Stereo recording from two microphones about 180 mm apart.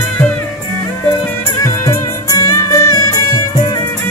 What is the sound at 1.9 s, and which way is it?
Music, 20° left (ahead or behind).